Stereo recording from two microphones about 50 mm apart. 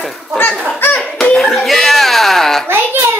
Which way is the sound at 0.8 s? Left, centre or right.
Left.